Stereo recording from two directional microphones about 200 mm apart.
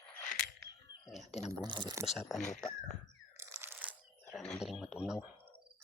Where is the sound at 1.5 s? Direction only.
20° right (ahead or behind).